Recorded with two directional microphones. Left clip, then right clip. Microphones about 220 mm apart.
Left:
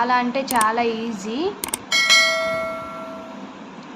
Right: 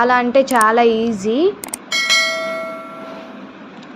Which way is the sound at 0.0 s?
20° right (ahead or behind).